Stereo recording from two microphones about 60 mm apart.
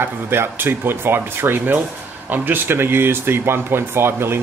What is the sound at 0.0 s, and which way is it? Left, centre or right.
Speech, right.